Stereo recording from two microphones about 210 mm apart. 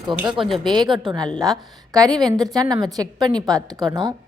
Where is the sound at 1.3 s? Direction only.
Centre (ahead or behind).